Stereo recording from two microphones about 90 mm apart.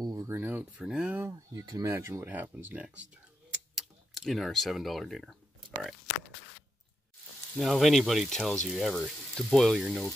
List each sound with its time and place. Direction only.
0.0 s a sound: 45° right (ahead or behind)
0.3 s a sound: 20° right (ahead or behind)
0.7 s speech: 10° right (ahead or behind)
1.5 s speech: 40° right (ahead or behind); by 2.9 s 20° right (ahead or behind)
3.7 s tick-tock: centre (ahead or behind)
7.5 s speech: centre (ahead or behind)